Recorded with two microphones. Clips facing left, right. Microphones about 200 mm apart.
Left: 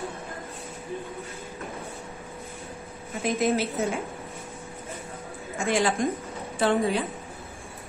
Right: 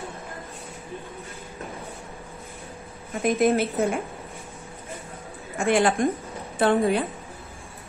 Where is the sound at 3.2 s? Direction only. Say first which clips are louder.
Right 4 dB; 55° right (ahead or behind).